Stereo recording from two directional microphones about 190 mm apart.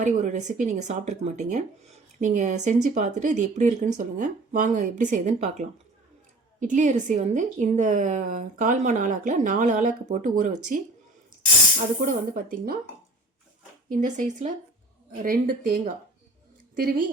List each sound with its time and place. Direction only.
0.0 s speech: 40° right (ahead or behind)
12.0 s speech: 45° right (ahead or behind)
13.9 s speech: 45° right (ahead or behind)